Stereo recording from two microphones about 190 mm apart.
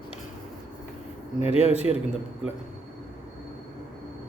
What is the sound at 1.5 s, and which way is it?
Speech, 30° left (ahead or behind).